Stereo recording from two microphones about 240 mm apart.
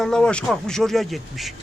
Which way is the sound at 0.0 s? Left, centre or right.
Centre.